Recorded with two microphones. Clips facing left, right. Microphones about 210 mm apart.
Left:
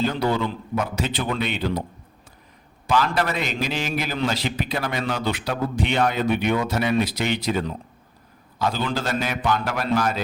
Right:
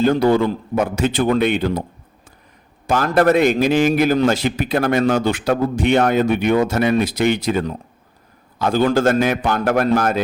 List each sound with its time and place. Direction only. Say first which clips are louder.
0.0 s a man's voice: right 8 dB; 50° right (ahead or behind)
2.8 s a man's voice: right 7 dB; 50° right (ahead or behind)